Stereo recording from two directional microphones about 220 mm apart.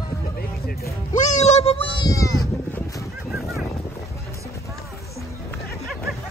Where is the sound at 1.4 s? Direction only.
30° left (ahead or behind).